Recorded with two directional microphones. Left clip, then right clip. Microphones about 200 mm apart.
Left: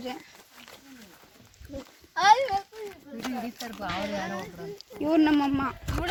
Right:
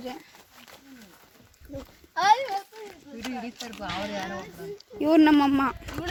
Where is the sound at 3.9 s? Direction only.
30° left (ahead or behind).